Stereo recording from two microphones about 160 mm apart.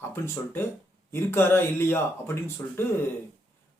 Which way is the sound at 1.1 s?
15° left (ahead or behind).